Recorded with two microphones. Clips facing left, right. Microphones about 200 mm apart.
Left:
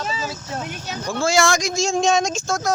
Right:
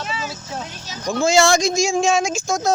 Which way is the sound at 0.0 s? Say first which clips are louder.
Left 1 dB; 35° left (ahead or behind).